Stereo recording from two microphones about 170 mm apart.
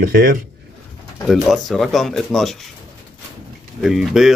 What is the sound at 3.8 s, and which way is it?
Speech, centre (ahead or behind).